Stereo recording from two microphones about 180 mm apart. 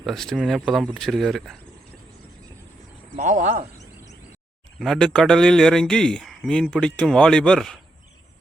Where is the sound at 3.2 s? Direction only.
40° right (ahead or behind).